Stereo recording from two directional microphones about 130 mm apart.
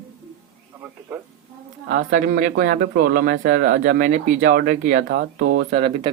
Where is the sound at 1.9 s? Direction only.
90° right.